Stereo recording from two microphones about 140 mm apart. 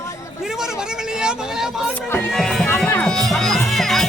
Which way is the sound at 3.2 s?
Centre (ahead or behind).